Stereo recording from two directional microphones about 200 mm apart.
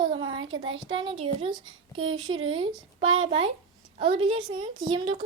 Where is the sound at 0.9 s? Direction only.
25° right (ahead or behind).